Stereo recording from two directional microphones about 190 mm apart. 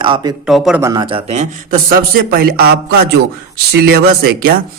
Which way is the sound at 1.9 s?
50° right (ahead or behind).